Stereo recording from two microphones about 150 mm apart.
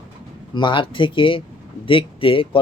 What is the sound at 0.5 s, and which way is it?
Speech, 30° left (ahead or behind).